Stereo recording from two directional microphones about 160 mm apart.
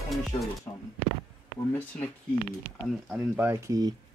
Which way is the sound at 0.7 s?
20° left (ahead or behind).